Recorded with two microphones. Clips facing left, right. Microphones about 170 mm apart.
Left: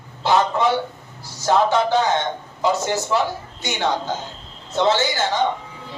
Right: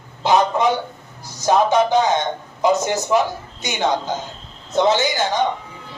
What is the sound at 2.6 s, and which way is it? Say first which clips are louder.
A man's voice: right 3 dB; 20° right (ahead or behind).